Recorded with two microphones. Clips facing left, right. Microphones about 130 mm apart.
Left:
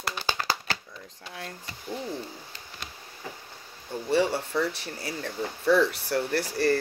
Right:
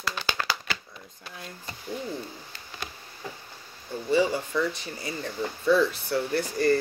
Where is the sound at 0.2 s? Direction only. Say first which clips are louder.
Left 1 dB; 45° left (ahead or behind).